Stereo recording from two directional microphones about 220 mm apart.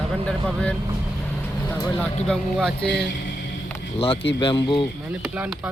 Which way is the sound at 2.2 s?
Centre (ahead or behind).